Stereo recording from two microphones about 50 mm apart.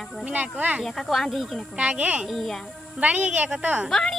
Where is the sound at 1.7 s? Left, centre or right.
Right.